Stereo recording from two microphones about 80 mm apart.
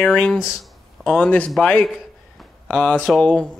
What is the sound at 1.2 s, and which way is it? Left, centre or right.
Speech, centre.